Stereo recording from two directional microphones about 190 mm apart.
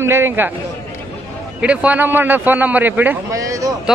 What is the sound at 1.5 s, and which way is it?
A man's voice, 5° right (ahead or behind).